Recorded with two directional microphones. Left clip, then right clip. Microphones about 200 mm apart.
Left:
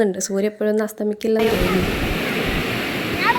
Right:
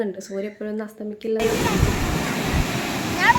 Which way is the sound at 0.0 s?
50° left (ahead or behind).